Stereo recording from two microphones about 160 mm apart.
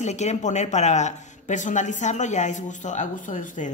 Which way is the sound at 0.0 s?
45° left (ahead or behind).